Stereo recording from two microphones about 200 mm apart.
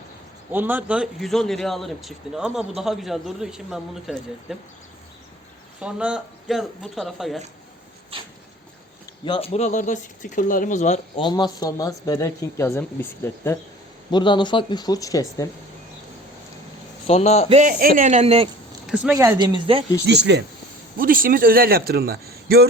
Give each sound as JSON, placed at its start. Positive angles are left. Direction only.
{"t": 0.5, "sound": "a man's voice", "side_deg": -10}
{"t": 5.8, "sound": "a man's voice", "side_deg": -5}
{"t": 8.1, "sound": "a sound", "side_deg": -25}
{"t": 9.2, "sound": "speech", "side_deg": 25}
{"t": 11.2, "sound": "speech", "side_deg": 20}
{"t": 17.1, "sound": "speech", "side_deg": 30}
{"t": 17.5, "sound": "speech", "side_deg": -40}
{"t": 18.9, "sound": "speech", "side_deg": -5}
{"t": 20.1, "sound": "speech", "side_deg": -60}
{"t": 21.0, "sound": "a man's voice", "side_deg": -45}